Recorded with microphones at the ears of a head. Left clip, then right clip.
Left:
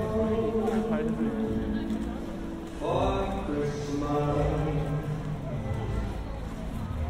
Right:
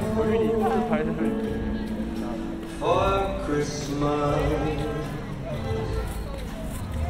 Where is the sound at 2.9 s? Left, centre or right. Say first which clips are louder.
Right 6 dB; right.